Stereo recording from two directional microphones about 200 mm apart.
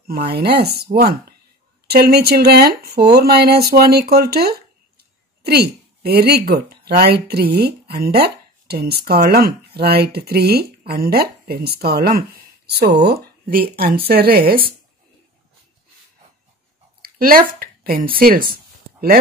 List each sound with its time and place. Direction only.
0.0 s speech: 50° right (ahead or behind)
17.0 s speech: 45° right (ahead or behind)